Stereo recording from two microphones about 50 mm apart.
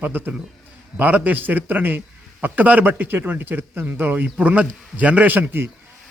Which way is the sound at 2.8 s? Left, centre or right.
Right.